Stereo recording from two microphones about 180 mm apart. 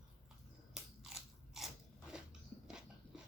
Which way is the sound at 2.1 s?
5° right (ahead or behind).